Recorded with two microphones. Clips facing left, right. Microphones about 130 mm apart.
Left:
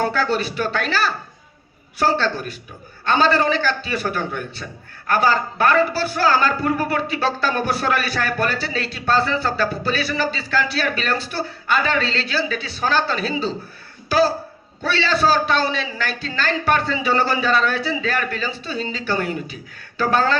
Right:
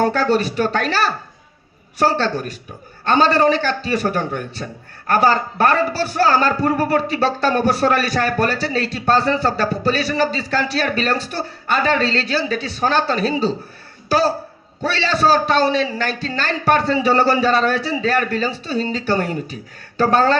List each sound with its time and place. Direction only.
0.0 s a man's voice: 40° right (ahead or behind)
14.8 s a man's voice: 40° right (ahead or behind)